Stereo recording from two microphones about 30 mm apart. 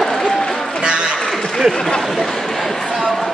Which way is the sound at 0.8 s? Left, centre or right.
Right.